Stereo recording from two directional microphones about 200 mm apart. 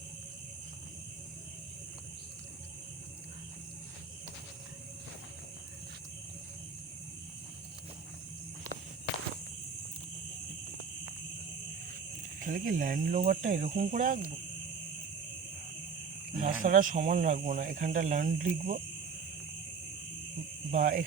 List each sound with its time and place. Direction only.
12.4 s speech: 45° right (ahead or behind)
16.4 s speech: 40° right (ahead or behind)
20.7 s speech: 40° right (ahead or behind)